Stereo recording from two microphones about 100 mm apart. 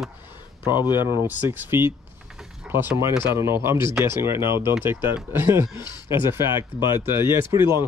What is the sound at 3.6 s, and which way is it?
Speech, 25° right (ahead or behind).